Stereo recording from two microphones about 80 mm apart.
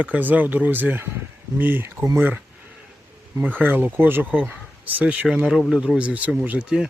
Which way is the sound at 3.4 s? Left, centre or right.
Right.